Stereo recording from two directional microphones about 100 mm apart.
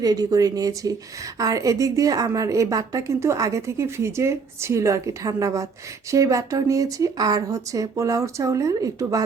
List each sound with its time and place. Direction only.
0.0 s a woman's voice: 40° right (ahead or behind)